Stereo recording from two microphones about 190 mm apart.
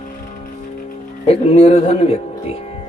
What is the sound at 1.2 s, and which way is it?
A man's voice, 35° left (ahead or behind).